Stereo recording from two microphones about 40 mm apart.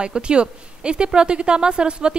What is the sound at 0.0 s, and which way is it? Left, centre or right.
Speech, right.